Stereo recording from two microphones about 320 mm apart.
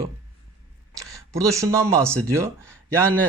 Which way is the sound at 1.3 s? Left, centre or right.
Centre.